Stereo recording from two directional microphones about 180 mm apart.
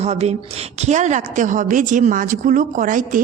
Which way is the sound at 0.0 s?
35° right (ahead or behind).